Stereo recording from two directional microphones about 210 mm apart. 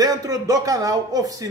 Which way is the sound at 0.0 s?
15° right (ahead or behind).